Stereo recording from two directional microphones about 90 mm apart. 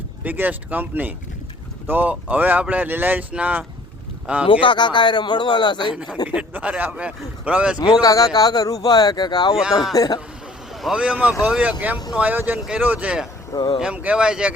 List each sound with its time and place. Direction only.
0.3 s speech: 20° right (ahead or behind)
4.6 s speech: 65° left (ahead or behind)
5.9 s speech: 10° right (ahead or behind)
8.0 s a man's voice: 40° left (ahead or behind)
10.9 s speech: 15° right (ahead or behind)
12.1 s speech: 20° right (ahead or behind)
13.5 s speech: 55° left (ahead or behind)
13.7 s speech: 10° right (ahead or behind)